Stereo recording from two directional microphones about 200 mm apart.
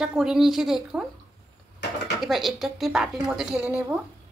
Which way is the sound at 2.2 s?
Centre (ahead or behind).